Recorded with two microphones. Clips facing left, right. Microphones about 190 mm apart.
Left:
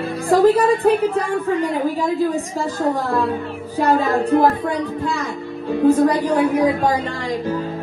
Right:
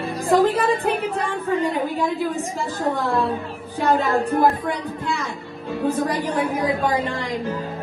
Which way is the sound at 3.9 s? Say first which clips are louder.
Left 3 dB; 30° left (ahead or behind).